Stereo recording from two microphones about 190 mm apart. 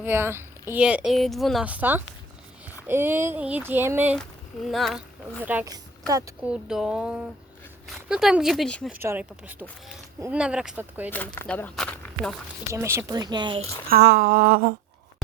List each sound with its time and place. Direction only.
0.0 s a woman's voice: 10° right (ahead or behind)
4.1 s speech: centre (ahead or behind)
5.4 s a woman's voice: 10° right (ahead or behind)
6.4 s a woman's voice: 5° right (ahead or behind)
8.9 s speech: 10° right (ahead or behind)
11.1 s speech: 10° left (ahead or behind)
12.7 s speech: 15° right (ahead or behind)
13.8 s a sound: 55° right (ahead or behind)